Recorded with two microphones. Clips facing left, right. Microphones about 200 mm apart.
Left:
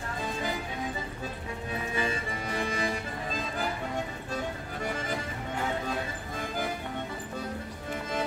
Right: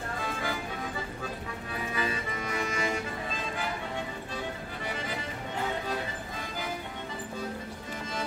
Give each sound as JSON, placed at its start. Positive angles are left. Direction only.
{"t": 2.0, "sound": "music", "side_deg": 30}
{"t": 4.8, "sound": "music", "side_deg": 45}